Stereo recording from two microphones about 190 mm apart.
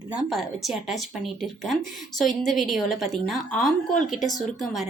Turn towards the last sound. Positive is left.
turn(degrees=0)  # may be behind; listen again after turning